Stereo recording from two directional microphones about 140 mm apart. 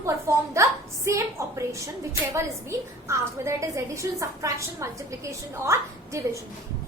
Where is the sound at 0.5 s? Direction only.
20° right (ahead or behind).